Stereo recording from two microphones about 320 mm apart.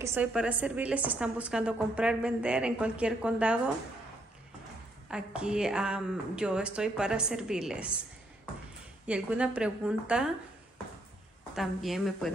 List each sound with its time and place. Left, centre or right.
0.0 s a woman's voice: centre
5.1 s a woman's voice: centre
9.0 s a woman's voice: centre
11.5 s a woman's voice: centre